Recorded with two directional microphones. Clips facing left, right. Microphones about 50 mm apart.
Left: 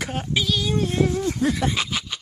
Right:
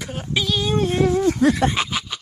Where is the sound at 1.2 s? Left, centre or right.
Right.